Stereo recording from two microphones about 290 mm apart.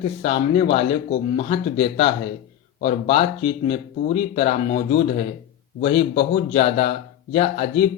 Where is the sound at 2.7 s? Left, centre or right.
Left.